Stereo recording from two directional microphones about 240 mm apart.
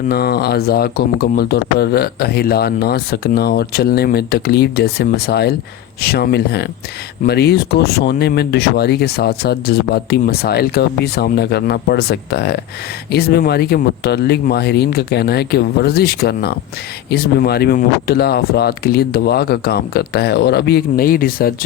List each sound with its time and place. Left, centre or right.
0.1 s speech: left